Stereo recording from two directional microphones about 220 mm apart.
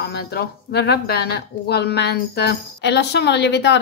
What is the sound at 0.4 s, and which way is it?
A woman's voice, 45° left (ahead or behind).